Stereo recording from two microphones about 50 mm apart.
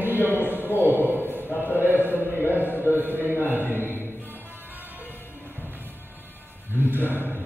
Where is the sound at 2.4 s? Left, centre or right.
Right.